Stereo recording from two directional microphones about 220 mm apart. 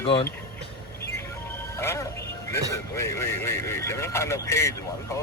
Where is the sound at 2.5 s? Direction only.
10° left (ahead or behind).